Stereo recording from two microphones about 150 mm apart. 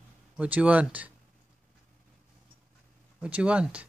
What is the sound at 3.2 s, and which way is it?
Speech, 10° right (ahead or behind).